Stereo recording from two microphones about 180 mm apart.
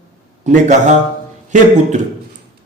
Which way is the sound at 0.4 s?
40° right (ahead or behind).